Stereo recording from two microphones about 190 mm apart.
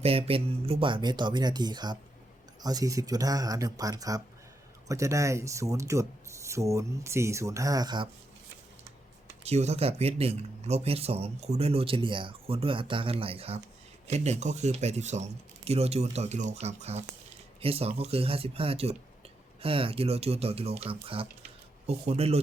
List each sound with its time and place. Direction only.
0.0 s speech: 30° right (ahead or behind)
9.4 s speech: 35° right (ahead or behind)